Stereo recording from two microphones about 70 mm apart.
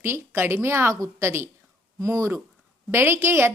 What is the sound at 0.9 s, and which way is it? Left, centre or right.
A woman's voice, right.